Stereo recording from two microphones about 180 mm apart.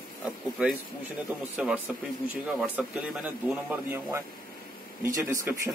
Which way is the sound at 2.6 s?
5° right (ahead or behind).